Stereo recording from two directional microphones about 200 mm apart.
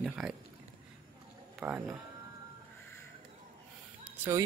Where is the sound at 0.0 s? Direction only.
Centre (ahead or behind).